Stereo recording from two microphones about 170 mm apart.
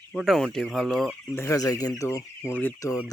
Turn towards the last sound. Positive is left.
turn(degrees=20)  # may be behind; listen again after turning